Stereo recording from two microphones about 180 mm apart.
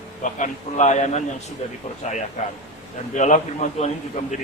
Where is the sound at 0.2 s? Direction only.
45° left (ahead or behind).